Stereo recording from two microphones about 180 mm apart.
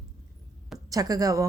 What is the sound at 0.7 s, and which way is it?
Speech, 20° right (ahead or behind).